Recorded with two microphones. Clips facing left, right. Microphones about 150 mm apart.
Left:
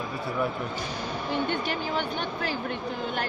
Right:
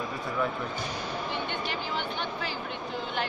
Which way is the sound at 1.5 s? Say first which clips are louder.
Left 4 dB; 45° left (ahead or behind).